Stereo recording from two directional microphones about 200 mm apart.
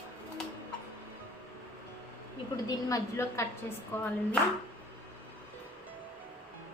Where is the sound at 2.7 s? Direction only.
15° left (ahead or behind).